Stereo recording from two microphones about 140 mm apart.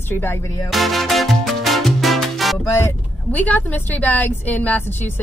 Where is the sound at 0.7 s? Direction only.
Centre (ahead or behind).